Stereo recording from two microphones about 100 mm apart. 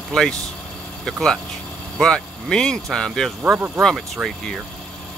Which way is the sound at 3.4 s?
20° right (ahead or behind).